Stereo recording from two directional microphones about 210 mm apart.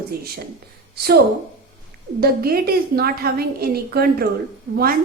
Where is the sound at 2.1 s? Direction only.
45° right (ahead or behind).